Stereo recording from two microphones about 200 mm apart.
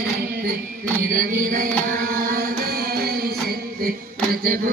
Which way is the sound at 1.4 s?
45° right (ahead or behind).